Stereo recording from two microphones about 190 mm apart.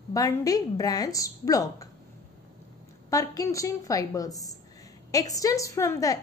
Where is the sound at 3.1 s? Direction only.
15° left (ahead or behind).